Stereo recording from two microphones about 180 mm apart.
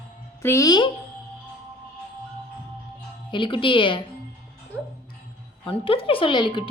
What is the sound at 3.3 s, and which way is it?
Speech, 30° left (ahead or behind).